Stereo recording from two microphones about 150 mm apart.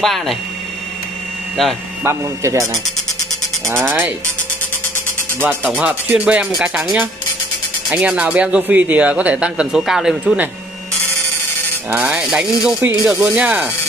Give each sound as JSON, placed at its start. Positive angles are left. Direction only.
{"t": 0.0, "sound": "mechanisms", "side_deg": 0}
{"t": 2.0, "sound": "a man's voice", "side_deg": -20}
{"t": 3.7, "sound": "a man's voice", "side_deg": -15}
{"t": 5.4, "sound": "a man's voice", "side_deg": -10}
{"t": 11.9, "sound": "mechanisms", "side_deg": -10}
{"t": 12.8, "sound": "a man's voice", "side_deg": -10}